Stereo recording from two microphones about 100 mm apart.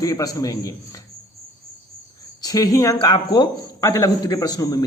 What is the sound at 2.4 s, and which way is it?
A man's voice, 35° left (ahead or behind).